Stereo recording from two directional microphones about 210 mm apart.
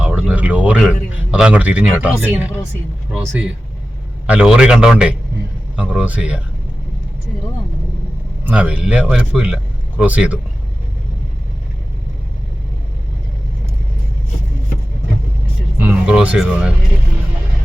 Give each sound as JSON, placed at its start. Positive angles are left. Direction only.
{"t": 0.0, "sound": "a sound", "side_deg": -5}
{"t": 2.0, "sound": "speech", "side_deg": -5}
{"t": 4.3, "sound": "a man's voice", "side_deg": -5}
{"t": 8.4, "sound": "a man's voice", "side_deg": -5}
{"t": 15.8, "sound": "a man's voice", "side_deg": -5}